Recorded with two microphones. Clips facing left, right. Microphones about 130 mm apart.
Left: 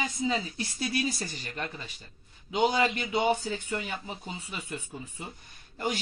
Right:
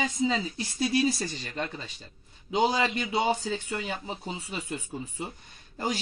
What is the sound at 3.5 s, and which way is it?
A man's voice, 30° right (ahead or behind).